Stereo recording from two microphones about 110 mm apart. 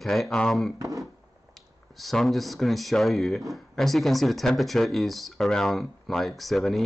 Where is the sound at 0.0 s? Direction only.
Centre (ahead or behind).